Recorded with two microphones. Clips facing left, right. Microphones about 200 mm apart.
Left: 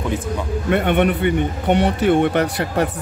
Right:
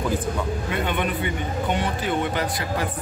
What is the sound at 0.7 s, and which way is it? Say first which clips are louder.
A man's voice: left 12 dB; 65° left (ahead or behind).